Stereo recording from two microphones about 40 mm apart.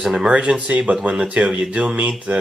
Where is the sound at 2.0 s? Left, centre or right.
Right.